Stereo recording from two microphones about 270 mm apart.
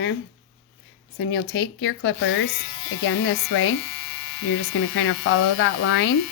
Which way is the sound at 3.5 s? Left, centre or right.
Left.